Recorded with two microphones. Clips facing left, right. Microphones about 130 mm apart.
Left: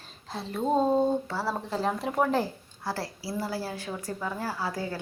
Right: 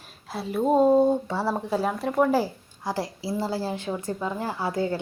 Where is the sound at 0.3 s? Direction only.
10° right (ahead or behind).